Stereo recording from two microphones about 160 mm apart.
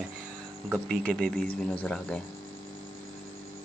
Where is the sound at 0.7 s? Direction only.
5° left (ahead or behind).